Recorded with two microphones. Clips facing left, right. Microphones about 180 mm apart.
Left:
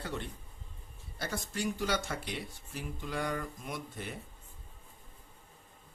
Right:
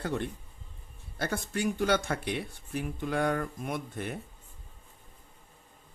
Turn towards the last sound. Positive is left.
turn(degrees=-55)  # may be behind; listen again after turning